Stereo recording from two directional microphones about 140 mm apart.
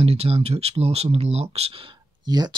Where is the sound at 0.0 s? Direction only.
45° right (ahead or behind).